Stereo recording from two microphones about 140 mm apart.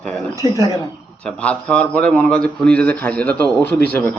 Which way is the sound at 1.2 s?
10° left (ahead or behind).